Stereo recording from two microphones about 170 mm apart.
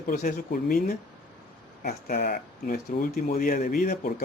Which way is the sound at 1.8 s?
60° left (ahead or behind).